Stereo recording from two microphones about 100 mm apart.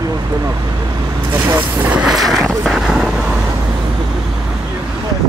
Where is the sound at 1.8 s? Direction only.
5° right (ahead or behind).